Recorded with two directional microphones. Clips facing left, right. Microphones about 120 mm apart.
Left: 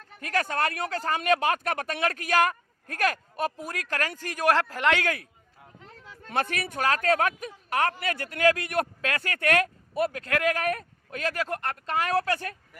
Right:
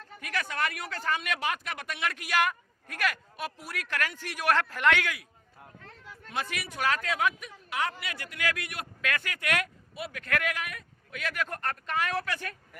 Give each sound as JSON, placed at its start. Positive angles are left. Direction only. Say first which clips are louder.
{"t": 0.2, "sound": "speech", "louder": "left 5 dB", "side_deg": 40}
{"t": 6.2, "sound": "speech", "louder": "left 6 dB", "side_deg": 50}
{"t": 9.0, "sound": "speech", "louder": "left 3 dB", "side_deg": 35}
{"t": 10.1, "sound": "speech", "louder": "left 5 dB", "side_deg": 30}
{"t": 10.5, "sound": "speech", "louder": "left 10 dB", "side_deg": 45}
{"t": 11.4, "sound": "speech", "louder": "left 3 dB", "side_deg": 25}